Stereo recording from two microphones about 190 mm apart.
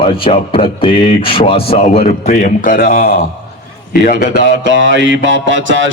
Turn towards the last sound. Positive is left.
turn(degrees=-75)  # may be behind; listen again after turning